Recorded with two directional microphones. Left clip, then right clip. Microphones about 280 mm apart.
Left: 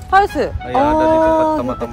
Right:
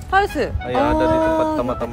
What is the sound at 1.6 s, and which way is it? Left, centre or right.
Speech, centre.